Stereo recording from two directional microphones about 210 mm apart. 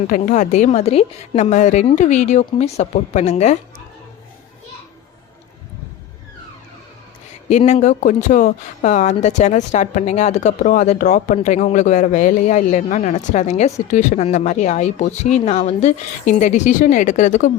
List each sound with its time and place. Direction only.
0.1 s speech: 35° left (ahead or behind)
7.5 s speech: 35° left (ahead or behind)